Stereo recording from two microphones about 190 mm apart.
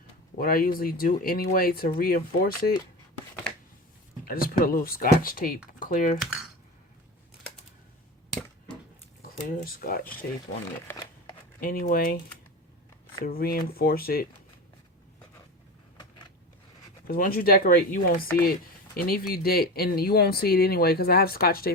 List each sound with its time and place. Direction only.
0.3 s speech: 50° left (ahead or behind)
4.3 s speech: 50° left (ahead or behind)
8.3 s a sound: 5° left (ahead or behind)
9.7 s speech: 50° left (ahead or behind)
11.6 s speech: 50° left (ahead or behind)
13.2 s speech: 50° left (ahead or behind)
17.1 s speech: 50° left (ahead or behind)